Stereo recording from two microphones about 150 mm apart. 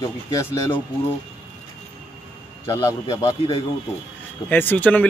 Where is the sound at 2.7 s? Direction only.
20° left (ahead or behind).